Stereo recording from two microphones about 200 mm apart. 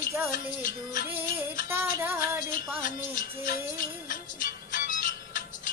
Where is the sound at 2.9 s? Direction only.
40° left (ahead or behind).